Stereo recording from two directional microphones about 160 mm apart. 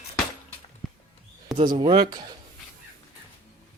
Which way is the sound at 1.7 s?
30° right (ahead or behind).